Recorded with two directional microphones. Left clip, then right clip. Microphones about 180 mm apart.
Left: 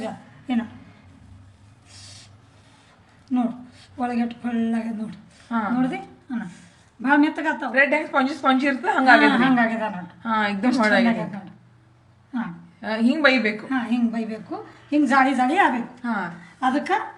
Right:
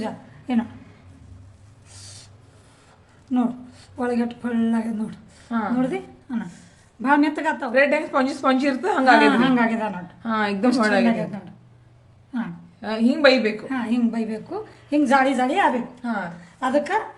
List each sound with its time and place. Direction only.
0.0 s a sound: 50° right (ahead or behind)
3.3 s a woman's voice: 40° right (ahead or behind)
7.7 s a woman's voice: 25° right (ahead or behind)
9.3 s a woman's voice: 45° right (ahead or behind)
10.2 s a woman's voice: 30° right (ahead or behind)
12.8 s a woman's voice: 20° right (ahead or behind)
13.7 s a woman's voice: 45° right (ahead or behind)
16.0 s a woman's voice: 15° right (ahead or behind)
16.6 s a woman's voice: 50° right (ahead or behind)